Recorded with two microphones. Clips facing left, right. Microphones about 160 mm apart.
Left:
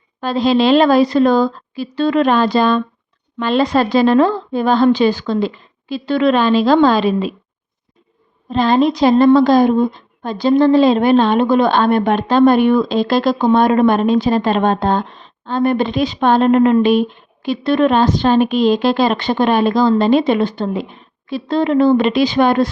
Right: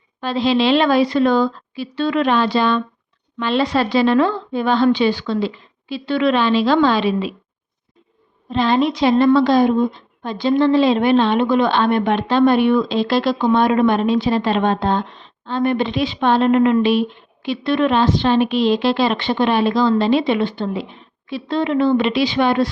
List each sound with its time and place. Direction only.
0.2 s a woman's voice: 45° left (ahead or behind)
8.4 s a woman's voice: 40° left (ahead or behind)